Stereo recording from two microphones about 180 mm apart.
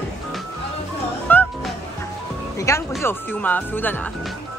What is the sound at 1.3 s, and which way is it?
Music, 10° left (ahead or behind).